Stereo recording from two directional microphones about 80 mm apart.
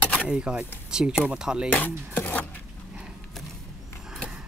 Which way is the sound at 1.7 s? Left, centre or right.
Left.